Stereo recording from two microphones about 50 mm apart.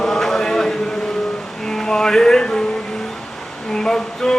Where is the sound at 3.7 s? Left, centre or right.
Centre.